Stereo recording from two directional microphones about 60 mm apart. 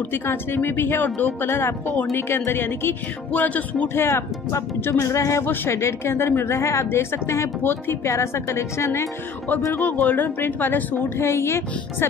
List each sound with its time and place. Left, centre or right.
0.1 s speech: left
3.3 s music: left
3.9 s a woman's voice: left
9.8 s speech: left
11.1 s a woman's voice: left